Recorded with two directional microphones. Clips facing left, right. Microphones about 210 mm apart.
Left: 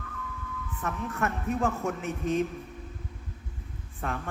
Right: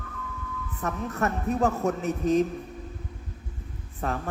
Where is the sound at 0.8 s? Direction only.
40° right (ahead or behind).